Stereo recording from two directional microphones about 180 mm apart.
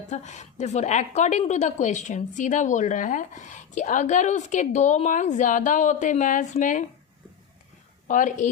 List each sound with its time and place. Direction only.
0.1 s a woman's voice: 40° left (ahead or behind)
8.0 s a woman's voice: 45° left (ahead or behind)